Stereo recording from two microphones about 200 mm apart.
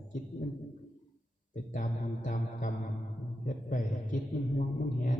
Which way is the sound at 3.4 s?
40° left (ahead or behind).